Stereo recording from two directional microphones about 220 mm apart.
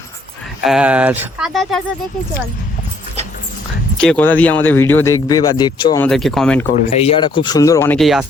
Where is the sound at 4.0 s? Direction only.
5° left (ahead or behind).